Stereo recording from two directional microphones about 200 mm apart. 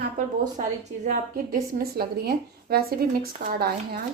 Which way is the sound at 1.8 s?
50° right (ahead or behind).